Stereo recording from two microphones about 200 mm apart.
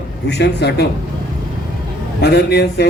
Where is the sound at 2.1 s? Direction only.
55° left (ahead or behind).